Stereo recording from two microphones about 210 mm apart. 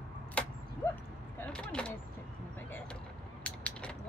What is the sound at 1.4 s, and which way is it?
Speech, 5° left (ahead or behind).